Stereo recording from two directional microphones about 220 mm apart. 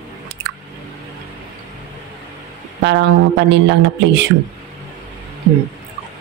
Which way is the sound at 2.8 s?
50° right (ahead or behind).